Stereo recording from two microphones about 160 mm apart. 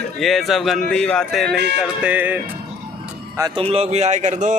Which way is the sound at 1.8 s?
10° right (ahead or behind).